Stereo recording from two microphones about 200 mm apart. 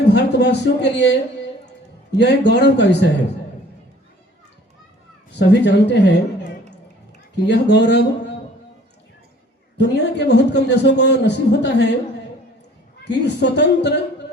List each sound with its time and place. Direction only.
0.1 s a man's voice: 60° left (ahead or behind)
5.4 s a man's voice: 60° left (ahead or behind)
7.4 s a man's voice: 60° left (ahead or behind)
9.7 s a man's voice: 60° left (ahead or behind)
13.1 s a man's voice: 60° left (ahead or behind)